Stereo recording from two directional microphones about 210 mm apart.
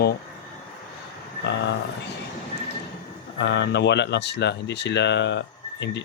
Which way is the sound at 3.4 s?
55° left (ahead or behind).